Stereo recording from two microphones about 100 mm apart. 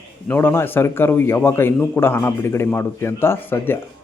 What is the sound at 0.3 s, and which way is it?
A man's voice, 20° left (ahead or behind).